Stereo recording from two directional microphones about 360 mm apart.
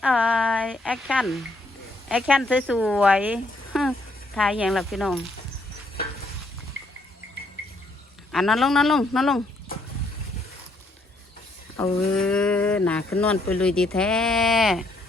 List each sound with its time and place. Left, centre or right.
0.0 s speech: centre
8.3 s speech: centre
11.8 s speech: centre